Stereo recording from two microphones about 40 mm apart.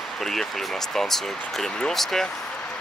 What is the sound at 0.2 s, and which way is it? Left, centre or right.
Speech, centre.